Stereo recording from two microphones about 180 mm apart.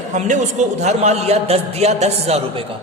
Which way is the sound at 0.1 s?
40° right (ahead or behind).